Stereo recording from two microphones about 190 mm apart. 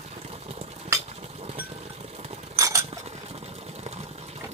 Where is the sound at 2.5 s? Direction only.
15° right (ahead or behind).